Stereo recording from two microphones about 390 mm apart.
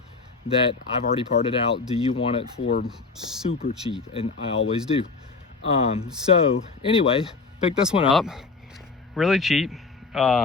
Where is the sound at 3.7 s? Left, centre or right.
Centre.